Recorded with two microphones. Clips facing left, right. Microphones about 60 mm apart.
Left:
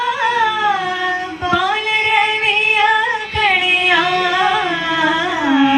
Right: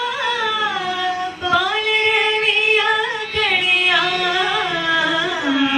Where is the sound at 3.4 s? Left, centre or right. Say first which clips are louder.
Left 3 dB; left.